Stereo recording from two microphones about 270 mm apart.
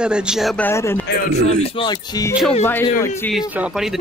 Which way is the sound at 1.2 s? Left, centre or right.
Left.